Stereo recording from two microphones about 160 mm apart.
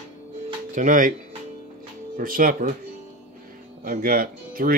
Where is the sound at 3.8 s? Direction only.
60° right (ahead or behind).